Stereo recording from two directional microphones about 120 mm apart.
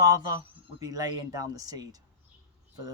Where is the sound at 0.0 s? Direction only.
30° right (ahead or behind).